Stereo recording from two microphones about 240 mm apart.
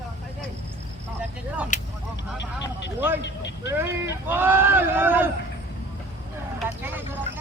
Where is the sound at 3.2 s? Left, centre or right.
Left.